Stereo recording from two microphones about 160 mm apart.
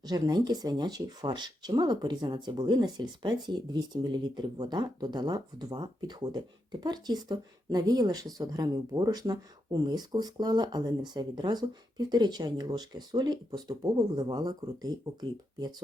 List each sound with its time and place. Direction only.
0.1 s speech: 25° right (ahead or behind)